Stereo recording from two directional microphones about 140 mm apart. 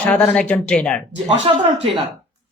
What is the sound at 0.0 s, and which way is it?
Speech, 10° left (ahead or behind).